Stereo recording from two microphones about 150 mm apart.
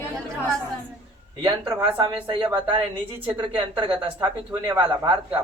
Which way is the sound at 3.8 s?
30° right (ahead or behind).